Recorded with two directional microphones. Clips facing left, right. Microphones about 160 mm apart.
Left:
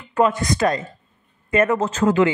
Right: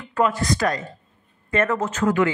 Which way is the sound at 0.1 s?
20° left (ahead or behind).